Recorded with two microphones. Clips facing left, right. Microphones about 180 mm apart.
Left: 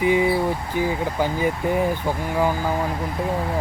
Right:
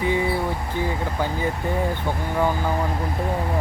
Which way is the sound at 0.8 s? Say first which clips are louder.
Left 3 dB; 15° left (ahead or behind).